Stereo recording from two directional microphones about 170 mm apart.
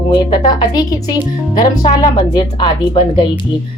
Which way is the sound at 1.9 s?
25° left (ahead or behind).